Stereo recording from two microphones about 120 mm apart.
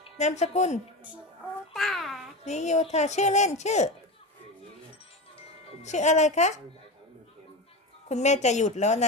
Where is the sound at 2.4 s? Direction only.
70° left (ahead or behind).